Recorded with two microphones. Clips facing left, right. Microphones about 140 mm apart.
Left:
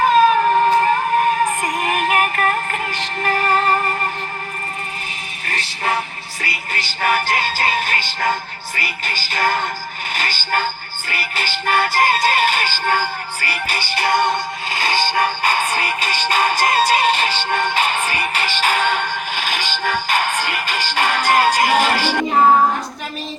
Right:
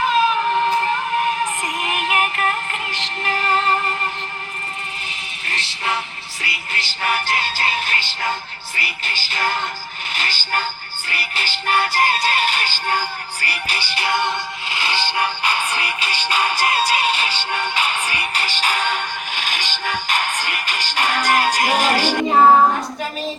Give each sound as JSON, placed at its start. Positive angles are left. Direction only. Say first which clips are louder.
{"t": 0.0, "sound": "child singing", "louder": "left 5 dB", "side_deg": 45}
{"t": 5.5, "sound": "music", "louder": "left 3 dB", "side_deg": 45}
{"t": 10.2, "sound": "speech", "louder": "left 3 dB", "side_deg": 45}
{"t": 11.1, "sound": "music", "louder": "left 3 dB", "side_deg": 45}
{"t": 21.8, "sound": "speech", "louder": "left 1 dB", "side_deg": -45}